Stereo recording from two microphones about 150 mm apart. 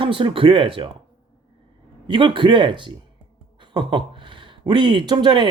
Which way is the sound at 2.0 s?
35° right (ahead or behind).